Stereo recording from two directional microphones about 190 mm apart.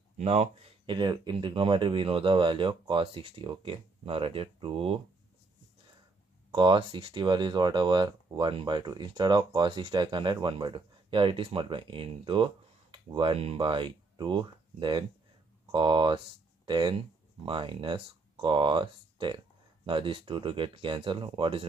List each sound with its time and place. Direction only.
0.2 s speech: 35° right (ahead or behind)
6.5 s speech: 25° right (ahead or behind)